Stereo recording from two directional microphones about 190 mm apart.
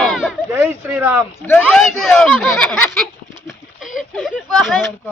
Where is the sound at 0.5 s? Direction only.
10° right (ahead or behind).